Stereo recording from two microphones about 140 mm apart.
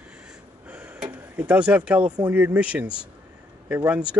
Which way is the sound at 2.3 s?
10° right (ahead or behind).